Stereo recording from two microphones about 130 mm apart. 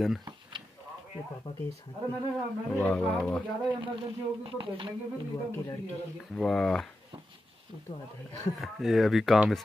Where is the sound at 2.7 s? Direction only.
10° left (ahead or behind).